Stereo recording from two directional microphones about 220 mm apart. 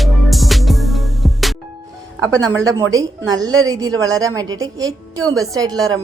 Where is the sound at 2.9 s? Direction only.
15° right (ahead or behind).